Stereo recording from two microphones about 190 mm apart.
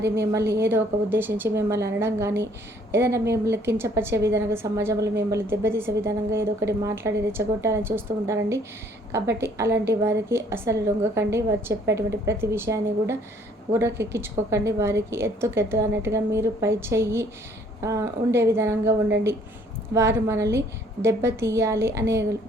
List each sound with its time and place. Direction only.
0.2 s a woman's voice: 15° right (ahead or behind)